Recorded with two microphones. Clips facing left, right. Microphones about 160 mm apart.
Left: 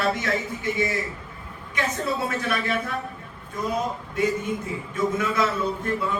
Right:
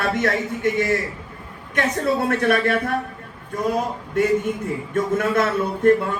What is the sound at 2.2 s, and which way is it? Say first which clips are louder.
Speech: right 7 dB; 55° right (ahead or behind).